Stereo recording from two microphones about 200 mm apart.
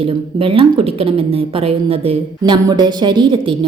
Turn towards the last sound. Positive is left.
turn(degrees=-25)  # may be behind; listen again after turning